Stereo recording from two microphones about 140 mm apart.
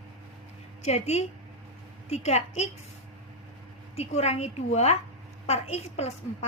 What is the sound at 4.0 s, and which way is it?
A woman's voice, 50° left (ahead or behind).